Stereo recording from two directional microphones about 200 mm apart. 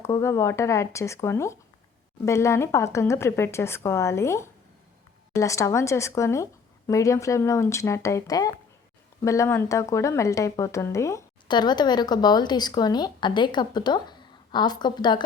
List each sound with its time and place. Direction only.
0.0 s speech: 15° left (ahead or behind)